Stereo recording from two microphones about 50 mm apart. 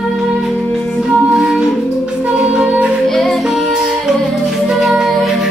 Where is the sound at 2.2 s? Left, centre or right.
Right.